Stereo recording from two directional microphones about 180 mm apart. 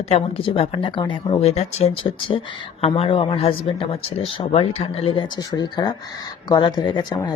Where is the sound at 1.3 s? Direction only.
35° left (ahead or behind).